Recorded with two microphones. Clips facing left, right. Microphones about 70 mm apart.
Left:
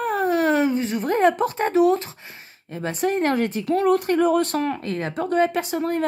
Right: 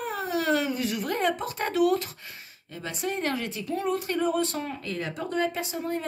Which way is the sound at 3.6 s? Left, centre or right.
Left.